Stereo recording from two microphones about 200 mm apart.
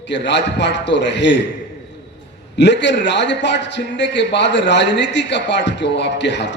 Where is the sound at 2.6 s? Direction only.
60° left (ahead or behind).